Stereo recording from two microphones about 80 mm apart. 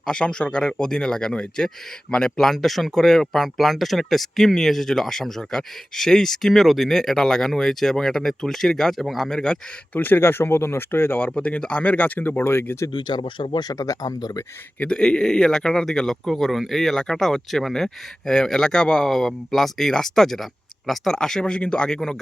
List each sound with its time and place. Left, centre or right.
0.1 s speech: centre
9.9 s speech: left
11.3 s speech: centre
12.9 s speech: left
14.8 s speech: centre